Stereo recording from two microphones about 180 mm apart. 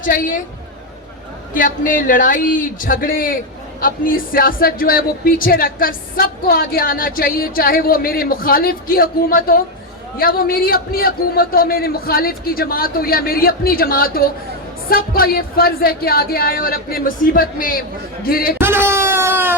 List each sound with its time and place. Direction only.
0.0 s speech: 50° left (ahead or behind)
1.5 s a man's voice: 45° left (ahead or behind)
18.6 s a sound: 15° right (ahead or behind)